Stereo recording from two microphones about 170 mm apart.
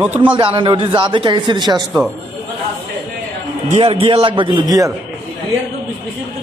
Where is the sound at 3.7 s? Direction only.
35° right (ahead or behind).